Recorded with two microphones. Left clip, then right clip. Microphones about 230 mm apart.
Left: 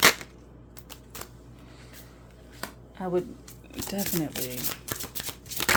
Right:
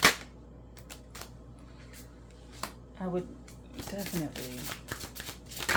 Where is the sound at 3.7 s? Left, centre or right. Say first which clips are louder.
Left 6 dB; left.